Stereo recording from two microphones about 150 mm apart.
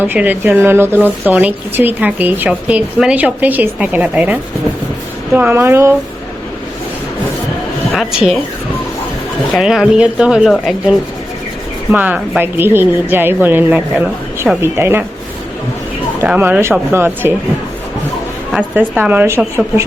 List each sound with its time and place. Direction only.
0.0 s a woman's voice: 10° right (ahead or behind)
7.9 s speech: centre (ahead or behind)
9.6 s a woman's voice: 5° right (ahead or behind)
16.2 s a woman's voice: 10° right (ahead or behind)
18.5 s a woman's voice: 10° right (ahead or behind)